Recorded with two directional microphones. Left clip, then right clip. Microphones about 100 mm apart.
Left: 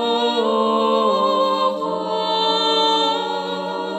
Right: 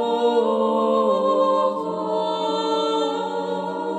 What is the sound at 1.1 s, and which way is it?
Music, 45° right (ahead or behind).